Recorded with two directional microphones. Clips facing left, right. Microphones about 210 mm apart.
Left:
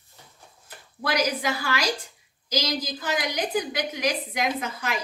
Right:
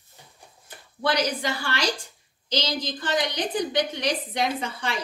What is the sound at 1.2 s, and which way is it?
Speech, 5° left (ahead or behind).